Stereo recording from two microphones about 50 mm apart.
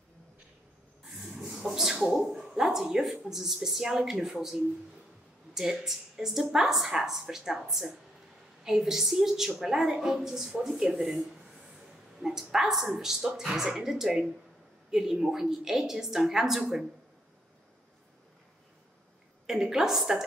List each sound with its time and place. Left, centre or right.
1.5 s a sound: centre
2.9 s a woman's voice: centre
19.4 s a woman's voice: centre